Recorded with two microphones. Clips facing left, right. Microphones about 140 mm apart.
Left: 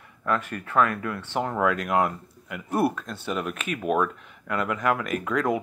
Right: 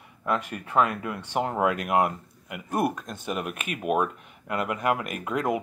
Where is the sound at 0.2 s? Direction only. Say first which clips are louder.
Left 1 dB; 15° right (ahead or behind).